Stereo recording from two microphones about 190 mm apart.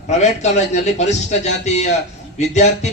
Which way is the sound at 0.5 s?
35° left (ahead or behind).